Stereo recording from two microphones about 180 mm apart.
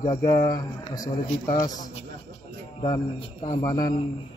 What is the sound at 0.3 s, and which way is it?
Speech, 50° left (ahead or behind).